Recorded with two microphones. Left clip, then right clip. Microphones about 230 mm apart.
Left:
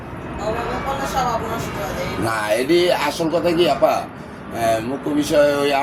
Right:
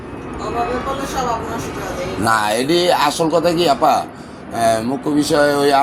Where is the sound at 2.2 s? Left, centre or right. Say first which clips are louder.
Right 4 dB; right.